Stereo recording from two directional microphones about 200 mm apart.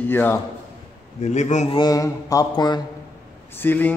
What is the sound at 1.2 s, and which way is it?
Speech, 35° left (ahead or behind).